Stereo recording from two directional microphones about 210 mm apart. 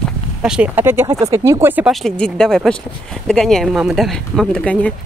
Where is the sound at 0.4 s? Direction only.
5° right (ahead or behind).